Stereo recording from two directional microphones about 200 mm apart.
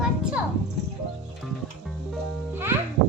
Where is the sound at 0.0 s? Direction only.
5° right (ahead or behind).